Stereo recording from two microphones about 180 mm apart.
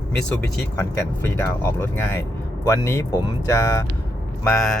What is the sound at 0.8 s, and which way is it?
Speech, 10° left (ahead or behind).